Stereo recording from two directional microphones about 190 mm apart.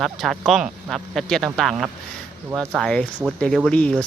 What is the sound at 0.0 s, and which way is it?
Speech, centre (ahead or behind).